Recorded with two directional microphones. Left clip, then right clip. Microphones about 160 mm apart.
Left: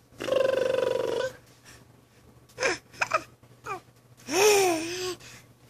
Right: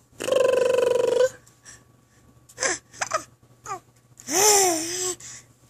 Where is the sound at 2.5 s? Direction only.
15° right (ahead or behind).